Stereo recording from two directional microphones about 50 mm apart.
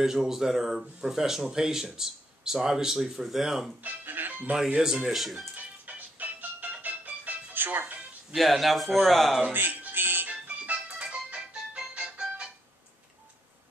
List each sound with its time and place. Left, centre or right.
0.0 s speech: centre
3.8 s speech: right
4.8 s speech: centre
5.1 s a man's voice: centre
5.9 s music: right
7.5 s music: right
8.4 s a man's voice: centre
9.5 s music: right
10.4 s music: right